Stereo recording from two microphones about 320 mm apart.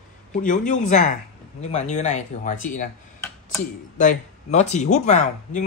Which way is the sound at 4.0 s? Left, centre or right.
Left.